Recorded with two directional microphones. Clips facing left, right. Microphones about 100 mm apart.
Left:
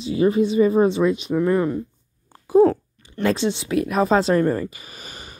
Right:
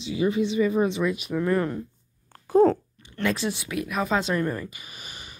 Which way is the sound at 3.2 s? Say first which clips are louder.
Left 5 dB; 30° left (ahead or behind).